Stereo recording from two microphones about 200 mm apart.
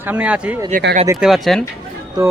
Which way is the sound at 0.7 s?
45° right (ahead or behind).